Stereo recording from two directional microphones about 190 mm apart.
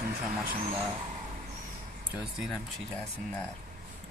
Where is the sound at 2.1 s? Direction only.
Centre (ahead or behind).